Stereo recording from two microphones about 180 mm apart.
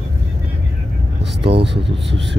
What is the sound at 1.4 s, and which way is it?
Speech, 30° right (ahead or behind).